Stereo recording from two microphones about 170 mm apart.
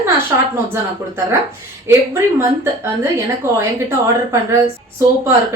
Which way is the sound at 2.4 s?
15° right (ahead or behind).